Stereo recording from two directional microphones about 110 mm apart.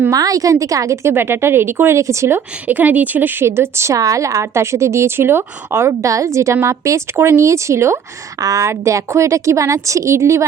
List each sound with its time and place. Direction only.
0.1 s a woman's voice: 35° right (ahead or behind)